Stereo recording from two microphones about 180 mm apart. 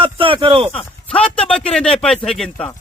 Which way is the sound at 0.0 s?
30° right (ahead or behind).